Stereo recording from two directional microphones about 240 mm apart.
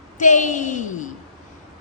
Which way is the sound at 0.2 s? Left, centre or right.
Left.